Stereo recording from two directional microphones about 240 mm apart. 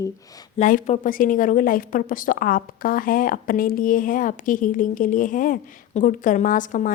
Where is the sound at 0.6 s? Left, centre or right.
Left.